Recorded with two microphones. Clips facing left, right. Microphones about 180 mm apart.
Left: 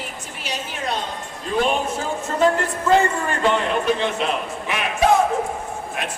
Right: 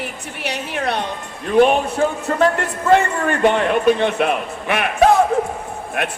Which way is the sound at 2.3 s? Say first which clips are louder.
Right 2 dB; 60° right (ahead or behind).